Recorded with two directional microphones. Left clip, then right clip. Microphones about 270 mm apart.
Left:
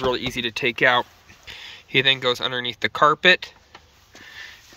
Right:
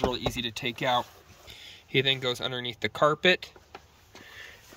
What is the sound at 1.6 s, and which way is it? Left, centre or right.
Speech, centre.